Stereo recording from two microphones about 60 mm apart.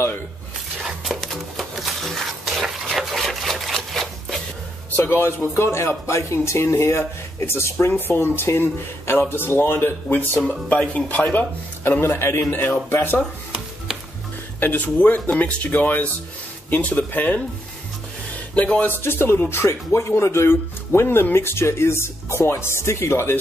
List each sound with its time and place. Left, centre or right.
0.8 s a sound: centre
4.9 s speech: left
10.7 s speech: left
14.6 s speech: left
18.8 s speech: left